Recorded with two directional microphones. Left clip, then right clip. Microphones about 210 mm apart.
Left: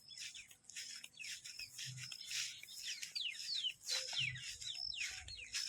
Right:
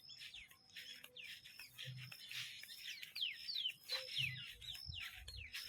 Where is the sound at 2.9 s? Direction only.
45° left (ahead or behind).